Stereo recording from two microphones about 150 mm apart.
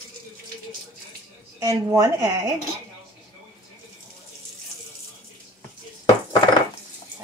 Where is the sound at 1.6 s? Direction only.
20° right (ahead or behind).